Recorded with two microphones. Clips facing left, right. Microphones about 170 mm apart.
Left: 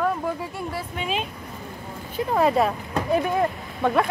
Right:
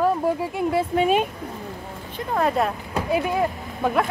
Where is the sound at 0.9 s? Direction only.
50° right (ahead or behind).